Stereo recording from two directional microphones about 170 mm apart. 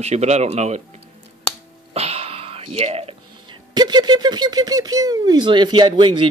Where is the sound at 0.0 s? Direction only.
40° right (ahead or behind).